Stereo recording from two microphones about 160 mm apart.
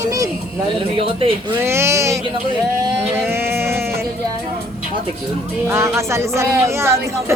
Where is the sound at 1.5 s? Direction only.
15° right (ahead or behind).